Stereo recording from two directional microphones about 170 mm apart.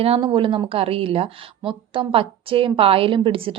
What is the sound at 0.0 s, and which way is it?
A woman's voice, 30° right (ahead or behind).